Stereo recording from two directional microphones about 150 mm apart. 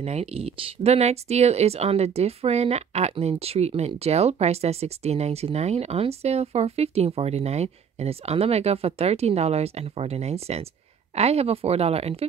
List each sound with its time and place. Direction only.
0.0 s speech: 45° right (ahead or behind)